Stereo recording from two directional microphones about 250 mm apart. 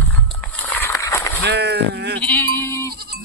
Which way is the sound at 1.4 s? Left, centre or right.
Right.